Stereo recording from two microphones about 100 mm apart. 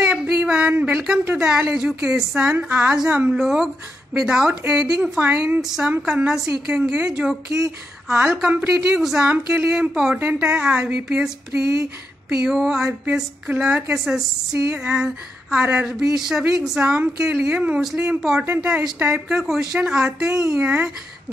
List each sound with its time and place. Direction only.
0.1 s a sound: 10° right (ahead or behind)
1.2 s speech: 15° right (ahead or behind)
3.3 s speech: 5° right (ahead or behind)
5.6 s a woman's voice: 5° right (ahead or behind)
8.6 s speech: 5° right (ahead or behind)
13.0 s speech: 15° right (ahead or behind)
13.9 s speech: 5° right (ahead or behind)